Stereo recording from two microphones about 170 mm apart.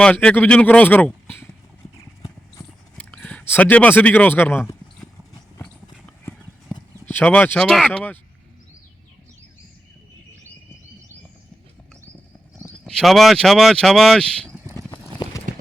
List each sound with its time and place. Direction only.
0.0 s speech: 5° left (ahead or behind)
2.9 s speech: 5° left (ahead or behind)
7.0 s speech: 10° left (ahead or behind)
12.8 s speech: centre (ahead or behind)
14.8 s clip-clop: 20° left (ahead or behind)